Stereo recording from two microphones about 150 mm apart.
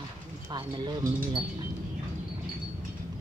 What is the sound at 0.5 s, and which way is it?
Speech, 30° right (ahead or behind).